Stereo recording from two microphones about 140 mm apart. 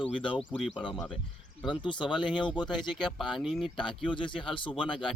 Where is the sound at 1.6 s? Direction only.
35° left (ahead or behind).